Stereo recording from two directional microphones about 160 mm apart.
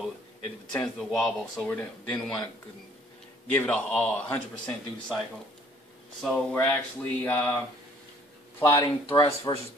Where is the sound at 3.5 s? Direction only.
5° left (ahead or behind).